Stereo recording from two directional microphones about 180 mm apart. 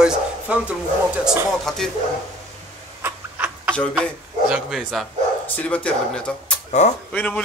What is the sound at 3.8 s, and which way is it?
A man's voice, centre (ahead or behind).